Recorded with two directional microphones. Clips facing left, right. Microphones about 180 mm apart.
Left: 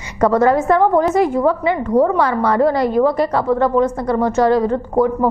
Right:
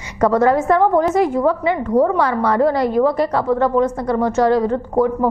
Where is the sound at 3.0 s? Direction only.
35° left (ahead or behind).